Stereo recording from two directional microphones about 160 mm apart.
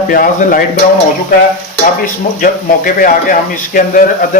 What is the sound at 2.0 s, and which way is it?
Speech, 60° left (ahead or behind).